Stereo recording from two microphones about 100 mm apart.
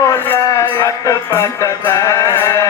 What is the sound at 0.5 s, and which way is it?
Music, 35° left (ahead or behind).